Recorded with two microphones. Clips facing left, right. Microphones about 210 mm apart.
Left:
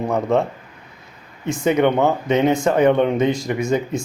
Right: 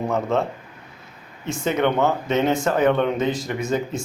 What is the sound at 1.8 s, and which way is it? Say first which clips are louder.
A man's voice: left 1 dB; 15° left (ahead or behind).